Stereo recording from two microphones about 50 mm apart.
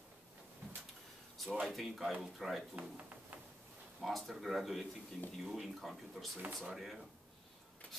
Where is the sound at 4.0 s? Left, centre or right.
Centre.